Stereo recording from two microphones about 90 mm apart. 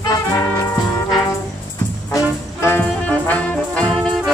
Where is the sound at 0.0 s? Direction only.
45° left (ahead or behind).